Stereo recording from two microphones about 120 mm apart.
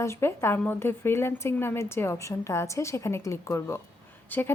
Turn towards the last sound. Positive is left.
turn(degrees=15)  # may be behind; listen again after turning